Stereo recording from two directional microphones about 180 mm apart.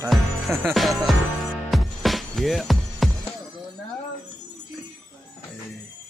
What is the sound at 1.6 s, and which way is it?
Music, centre (ahead or behind).